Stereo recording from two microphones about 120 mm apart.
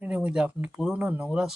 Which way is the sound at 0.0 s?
10° right (ahead or behind).